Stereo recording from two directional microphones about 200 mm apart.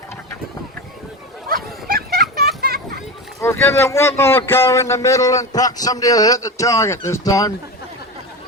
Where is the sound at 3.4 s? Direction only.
15° left (ahead or behind).